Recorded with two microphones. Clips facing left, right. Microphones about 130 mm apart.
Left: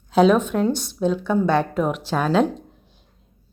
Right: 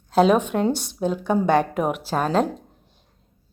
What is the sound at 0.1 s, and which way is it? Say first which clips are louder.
Speech: left 1 dB; 5° right (ahead or behind).